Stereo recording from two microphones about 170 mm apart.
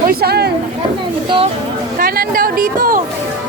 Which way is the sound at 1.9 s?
60° right (ahead or behind).